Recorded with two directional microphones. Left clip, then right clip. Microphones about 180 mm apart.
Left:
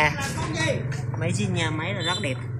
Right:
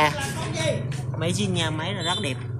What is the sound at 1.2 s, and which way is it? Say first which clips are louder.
Speech: right 2 dB; 10° right (ahead or behind).